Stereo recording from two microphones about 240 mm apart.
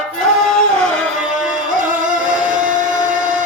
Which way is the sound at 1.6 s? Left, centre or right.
Right.